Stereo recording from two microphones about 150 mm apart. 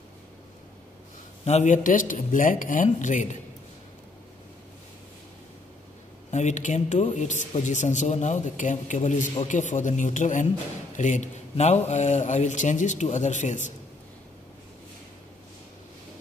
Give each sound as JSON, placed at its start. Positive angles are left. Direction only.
{"t": 1.4, "sound": "a man's voice", "side_deg": 50}
{"t": 6.3, "sound": "a man's voice", "side_deg": 55}